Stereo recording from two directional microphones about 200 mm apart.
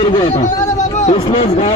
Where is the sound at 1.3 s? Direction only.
30° left (ahead or behind).